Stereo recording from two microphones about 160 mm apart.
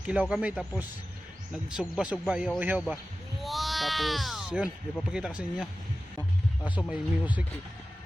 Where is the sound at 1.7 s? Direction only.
5° right (ahead or behind).